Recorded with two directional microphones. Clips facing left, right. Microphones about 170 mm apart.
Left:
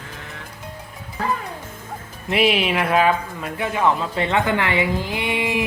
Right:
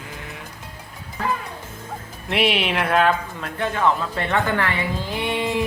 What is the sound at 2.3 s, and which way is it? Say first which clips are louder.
Speech: left 2 dB; centre (ahead or behind).